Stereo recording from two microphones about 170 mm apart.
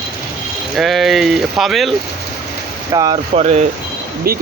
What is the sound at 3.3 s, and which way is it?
Speech, 40° right (ahead or behind).